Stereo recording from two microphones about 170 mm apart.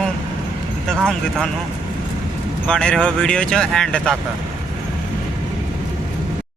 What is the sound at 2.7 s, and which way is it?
Speech, 5° left (ahead or behind).